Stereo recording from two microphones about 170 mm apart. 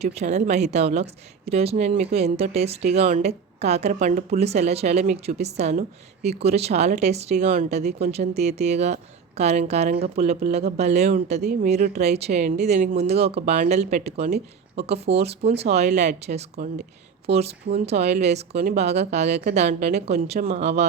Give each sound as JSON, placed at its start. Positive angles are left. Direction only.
{"t": 0.0, "sound": "speech", "side_deg": -40}